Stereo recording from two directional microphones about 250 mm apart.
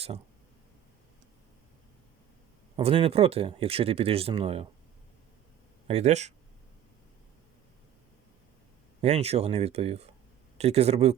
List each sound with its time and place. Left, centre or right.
2.7 s speech: right
5.9 s speech: right
9.0 s speech: right